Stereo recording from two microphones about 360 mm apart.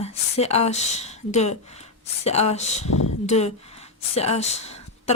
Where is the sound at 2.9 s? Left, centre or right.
Left.